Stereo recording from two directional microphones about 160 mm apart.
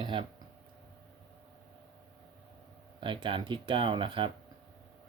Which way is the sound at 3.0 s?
30° right (ahead or behind).